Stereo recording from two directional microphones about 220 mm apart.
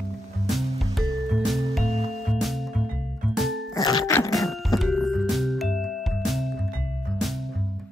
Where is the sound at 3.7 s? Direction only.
15° left (ahead or behind).